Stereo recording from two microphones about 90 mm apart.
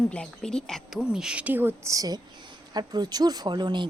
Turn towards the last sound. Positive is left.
turn(degrees=-55)  # may be behind; listen again after turning